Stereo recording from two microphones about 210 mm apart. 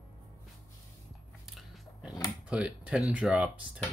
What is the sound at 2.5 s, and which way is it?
Speech, 5° right (ahead or behind).